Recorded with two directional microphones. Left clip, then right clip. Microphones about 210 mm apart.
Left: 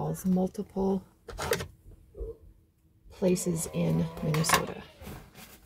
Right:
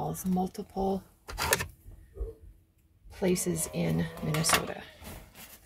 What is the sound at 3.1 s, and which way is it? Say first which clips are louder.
Speech: left 1 dB; 10° right (ahead or behind).